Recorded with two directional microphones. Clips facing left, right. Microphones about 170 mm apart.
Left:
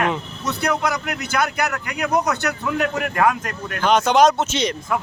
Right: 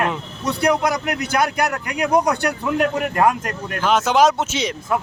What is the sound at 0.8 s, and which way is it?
A man's voice, 40° right (ahead or behind).